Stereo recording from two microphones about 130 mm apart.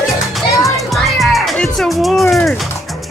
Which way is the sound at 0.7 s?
Centre (ahead or behind).